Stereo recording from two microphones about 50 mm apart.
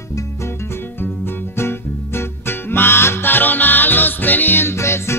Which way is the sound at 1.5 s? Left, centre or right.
Left.